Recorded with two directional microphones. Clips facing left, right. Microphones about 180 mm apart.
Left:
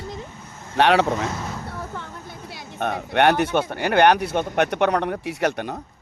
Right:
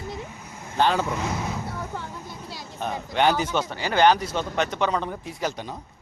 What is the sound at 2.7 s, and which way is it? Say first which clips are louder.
Speech: left 4 dB; 65° left (ahead or behind).